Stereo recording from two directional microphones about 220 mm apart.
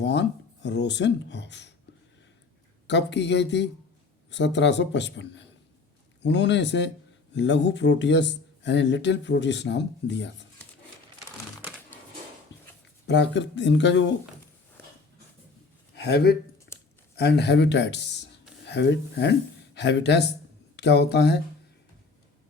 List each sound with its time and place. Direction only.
0.0 s speech: 50° left (ahead or behind)
2.8 s speech: 50° left (ahead or behind)
13.1 s speech: 55° left (ahead or behind)
16.0 s speech: 45° left (ahead or behind)
16.7 s a sound: 50° left (ahead or behind)
17.2 s speech: 50° left (ahead or behind)